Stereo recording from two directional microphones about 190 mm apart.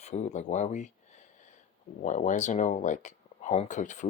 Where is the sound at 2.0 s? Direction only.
40° left (ahead or behind).